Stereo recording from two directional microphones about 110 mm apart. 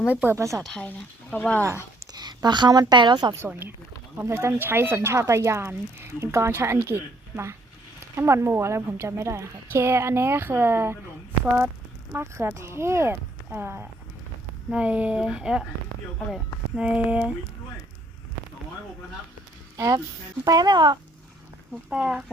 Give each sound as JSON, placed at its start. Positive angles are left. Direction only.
{"t": 0.1, "sound": "speech", "side_deg": -15}
{"t": 0.3, "sound": "speech", "side_deg": -25}
{"t": 0.6, "sound": "speech", "side_deg": 10}
{"t": 2.1, "sound": "a sound", "side_deg": -40}
{"t": 2.9, "sound": "speech", "side_deg": -45}
{"t": 3.3, "sound": "speech", "side_deg": -20}
{"t": 12.1, "sound": "speech", "side_deg": -20}
{"t": 16.7, "sound": "speech", "side_deg": -10}
{"t": 19.7, "sound": "speech", "side_deg": -30}
{"t": 21.8, "sound": "speech", "side_deg": -10}